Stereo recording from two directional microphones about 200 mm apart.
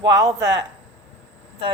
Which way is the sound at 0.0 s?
15° right (ahead or behind).